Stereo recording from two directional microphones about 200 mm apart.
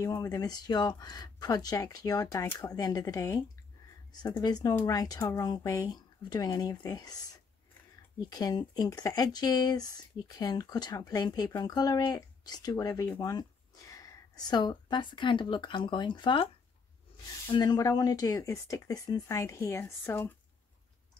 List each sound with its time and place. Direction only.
0.0 s speech: 15° left (ahead or behind)
8.2 s speech: 20° left (ahead or behind)
17.5 s speech: 20° left (ahead or behind)